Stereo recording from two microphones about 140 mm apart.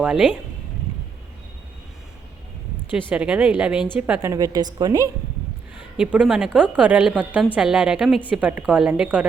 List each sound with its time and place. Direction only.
0.0 s speech: 5° right (ahead or behind)
3.1 s a woman's voice: 10° right (ahead or behind); by 5.1 s 25° right (ahead or behind)
6.0 s a woman's voice: 10° right (ahead or behind)